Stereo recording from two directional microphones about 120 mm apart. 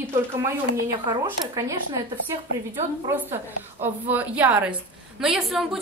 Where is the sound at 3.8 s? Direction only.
15° right (ahead or behind).